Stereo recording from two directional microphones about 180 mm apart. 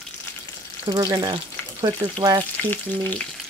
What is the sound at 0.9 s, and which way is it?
Speech, 20° right (ahead or behind).